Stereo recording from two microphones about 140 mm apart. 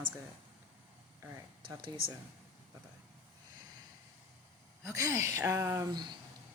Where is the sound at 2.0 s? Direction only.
90° right.